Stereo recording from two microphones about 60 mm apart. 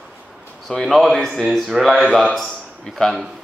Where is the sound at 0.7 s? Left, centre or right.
Centre.